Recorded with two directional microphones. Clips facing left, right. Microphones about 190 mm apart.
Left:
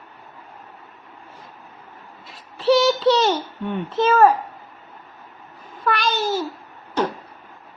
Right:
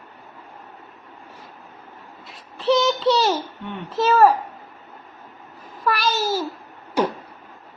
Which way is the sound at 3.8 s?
Centre (ahead or behind).